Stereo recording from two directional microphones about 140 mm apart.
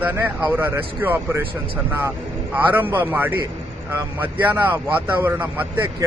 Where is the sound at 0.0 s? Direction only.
15° right (ahead or behind).